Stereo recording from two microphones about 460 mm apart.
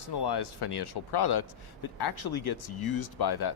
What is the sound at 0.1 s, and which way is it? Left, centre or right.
Speech, left.